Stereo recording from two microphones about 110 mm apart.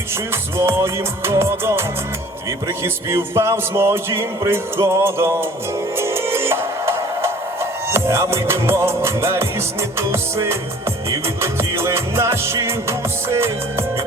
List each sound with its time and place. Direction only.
0.5 s speech: 25° right (ahead or behind)
2.8 s speech: 25° right (ahead or behind)
6.0 s music: 25° right (ahead or behind)
11.3 s speech: 25° right (ahead or behind)